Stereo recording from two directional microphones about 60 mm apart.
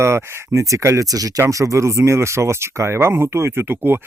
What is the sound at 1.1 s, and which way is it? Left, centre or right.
Speech, right.